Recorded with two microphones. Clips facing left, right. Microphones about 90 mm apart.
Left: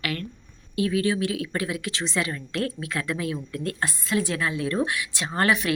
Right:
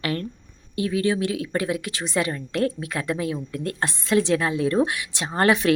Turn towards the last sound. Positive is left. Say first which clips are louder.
# right 3 dB
turn(degrees=-30)  # may be behind; listen again after turning